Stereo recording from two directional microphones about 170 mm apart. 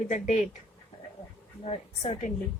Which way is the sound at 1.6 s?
35° left (ahead or behind).